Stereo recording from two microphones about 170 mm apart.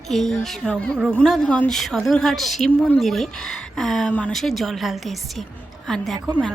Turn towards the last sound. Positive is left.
turn(degrees=-25)  # may be behind; listen again after turning